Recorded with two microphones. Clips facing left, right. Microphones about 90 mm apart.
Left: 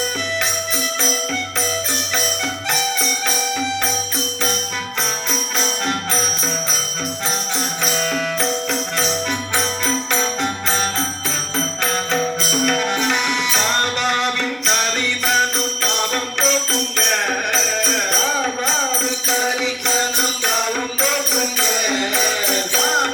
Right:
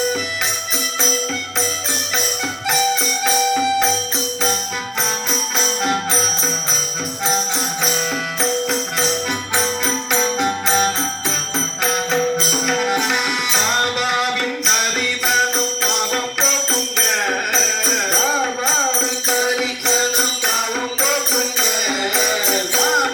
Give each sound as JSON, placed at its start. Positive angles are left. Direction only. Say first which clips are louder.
{"t": 9.6, "sound": "music", "louder": "right 1 dB", "side_deg": -10}
{"t": 15.8, "sound": "music", "louder": "right 1 dB", "side_deg": -5}